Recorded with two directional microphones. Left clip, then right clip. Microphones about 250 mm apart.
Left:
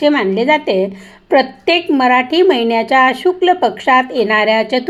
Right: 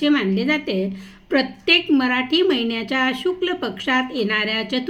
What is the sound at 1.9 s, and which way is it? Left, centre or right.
A woman's voice, centre.